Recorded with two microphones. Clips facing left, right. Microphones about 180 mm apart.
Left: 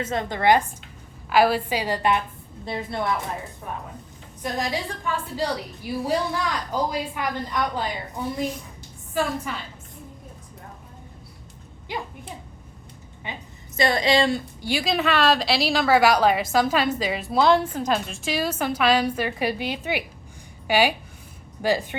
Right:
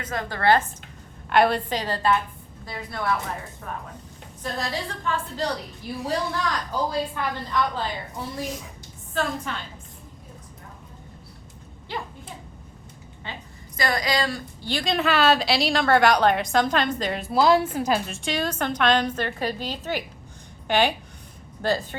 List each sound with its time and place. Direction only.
0.0 s a woman's voice: 25° left (ahead or behind)
1.3 s a woman's voice: 5° left (ahead or behind); by 3.2 s 25° left (ahead or behind)
4.4 s a woman's voice: 15° left (ahead or behind)
9.1 s a woman's voice: 5° left (ahead or behind)
11.9 s a woman's voice: 15° left (ahead or behind)
13.2 s a sound: 15° left (ahead or behind)
13.7 s a woman's voice: 25° left (ahead or behind)
14.6 s a woman's voice: 10° left (ahead or behind)